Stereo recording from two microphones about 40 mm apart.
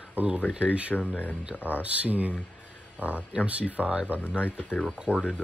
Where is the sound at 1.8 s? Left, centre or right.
Right.